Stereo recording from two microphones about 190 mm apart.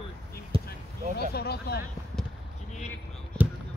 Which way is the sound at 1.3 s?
55° left (ahead or behind).